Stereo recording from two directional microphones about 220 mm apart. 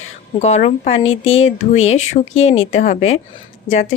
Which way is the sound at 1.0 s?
65° left (ahead or behind).